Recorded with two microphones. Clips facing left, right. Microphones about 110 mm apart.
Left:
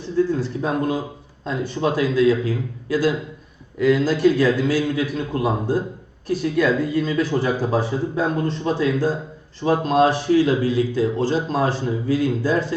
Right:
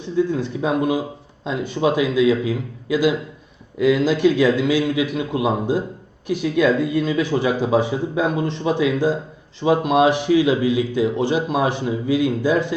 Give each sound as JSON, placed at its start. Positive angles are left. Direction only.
{"t": 0.3, "sound": "speech", "side_deg": -20}